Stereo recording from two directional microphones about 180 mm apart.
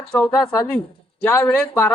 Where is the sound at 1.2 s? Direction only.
10° left (ahead or behind).